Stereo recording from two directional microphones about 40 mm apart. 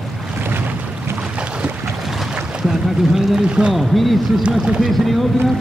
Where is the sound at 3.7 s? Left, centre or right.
Centre.